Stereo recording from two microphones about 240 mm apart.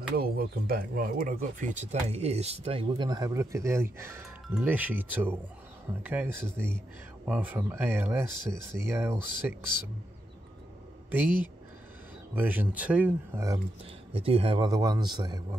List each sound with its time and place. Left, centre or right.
0.1 s speech: right; by 9.6 s centre
11.1 s speech: centre
14.1 s speech: right